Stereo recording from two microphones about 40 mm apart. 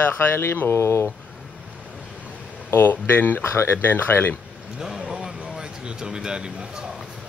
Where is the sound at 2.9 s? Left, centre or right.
Left.